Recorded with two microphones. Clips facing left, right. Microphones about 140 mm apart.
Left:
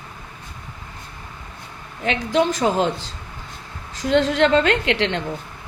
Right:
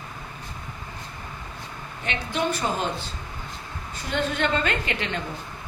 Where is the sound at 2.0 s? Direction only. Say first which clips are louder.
Left 8 dB; 90° left.